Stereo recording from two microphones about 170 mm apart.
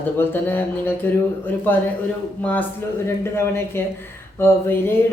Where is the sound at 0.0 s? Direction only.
10° left (ahead or behind).